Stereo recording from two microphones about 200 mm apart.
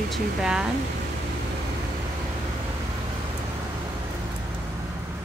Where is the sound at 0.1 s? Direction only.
5° right (ahead or behind).